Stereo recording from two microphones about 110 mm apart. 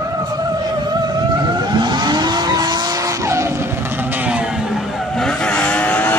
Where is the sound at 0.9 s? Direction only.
40° right (ahead or behind).